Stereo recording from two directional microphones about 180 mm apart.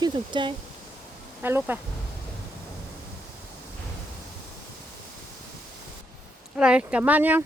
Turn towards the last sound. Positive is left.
turn(degrees=-10)  # may be behind; listen again after turning